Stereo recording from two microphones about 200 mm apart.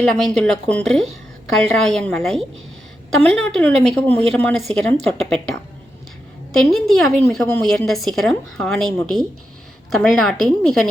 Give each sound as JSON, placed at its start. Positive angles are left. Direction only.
{"t": 0.0, "sound": "a woman's voice", "side_deg": 5}
{"t": 9.9, "sound": "a woman's voice", "side_deg": 0}